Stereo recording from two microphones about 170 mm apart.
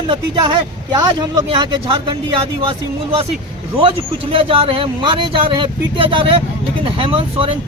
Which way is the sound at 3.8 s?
30° right (ahead or behind).